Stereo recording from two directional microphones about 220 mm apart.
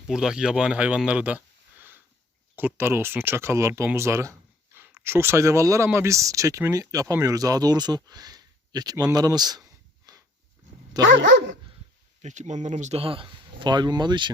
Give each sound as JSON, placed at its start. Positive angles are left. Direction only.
{"t": 0.1, "sound": "speech", "side_deg": -5}
{"t": 2.6, "sound": "speech", "side_deg": -10}
{"t": 10.1, "sound": "dog", "side_deg": -20}
{"t": 11.0, "sound": "dog", "side_deg": -55}
{"t": 12.2, "sound": "speech", "side_deg": -35}